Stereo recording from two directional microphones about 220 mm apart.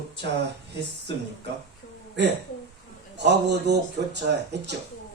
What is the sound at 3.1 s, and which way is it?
Speech, 50° right (ahead or behind).